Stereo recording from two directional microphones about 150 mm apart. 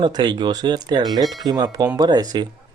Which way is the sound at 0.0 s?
30° right (ahead or behind).